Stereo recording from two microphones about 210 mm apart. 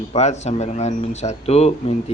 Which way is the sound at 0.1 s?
30° left (ahead or behind).